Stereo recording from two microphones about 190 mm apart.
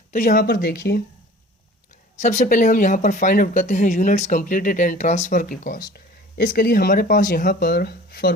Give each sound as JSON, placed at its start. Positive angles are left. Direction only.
{"t": 0.1, "sound": "speech", "side_deg": 45}
{"t": 0.5, "sound": "speech", "side_deg": 55}
{"t": 2.2, "sound": "speech", "side_deg": 40}